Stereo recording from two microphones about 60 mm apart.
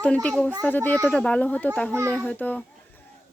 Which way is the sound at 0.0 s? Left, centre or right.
Left.